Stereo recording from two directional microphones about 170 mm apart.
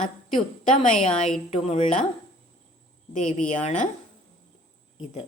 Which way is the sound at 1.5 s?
40° left (ahead or behind).